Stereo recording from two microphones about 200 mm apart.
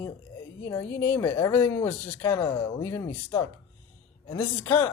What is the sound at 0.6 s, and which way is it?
Speech, 10° left (ahead or behind).